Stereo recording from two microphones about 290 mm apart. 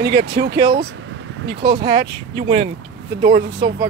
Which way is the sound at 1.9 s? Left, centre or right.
Centre.